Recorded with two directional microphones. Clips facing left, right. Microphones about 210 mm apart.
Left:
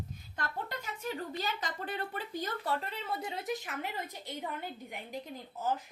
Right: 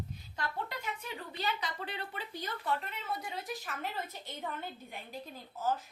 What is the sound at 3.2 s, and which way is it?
Speech, 25° left (ahead or behind).